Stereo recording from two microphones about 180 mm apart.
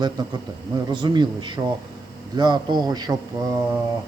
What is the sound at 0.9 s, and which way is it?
A man's voice, 25° right (ahead or behind).